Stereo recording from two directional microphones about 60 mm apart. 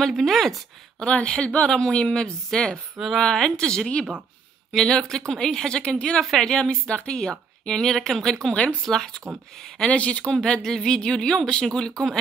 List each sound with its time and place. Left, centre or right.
0.0 s speech: centre
1.0 s speech: centre
9.8 s speech: left